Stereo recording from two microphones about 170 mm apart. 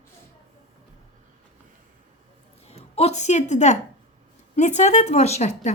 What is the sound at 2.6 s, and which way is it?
A woman's voice, 40° left (ahead or behind).